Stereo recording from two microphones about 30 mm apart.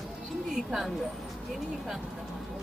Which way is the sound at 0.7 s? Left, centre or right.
Centre.